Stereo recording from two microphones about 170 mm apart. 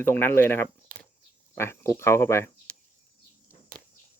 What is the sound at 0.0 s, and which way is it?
Speech, 10° left (ahead or behind).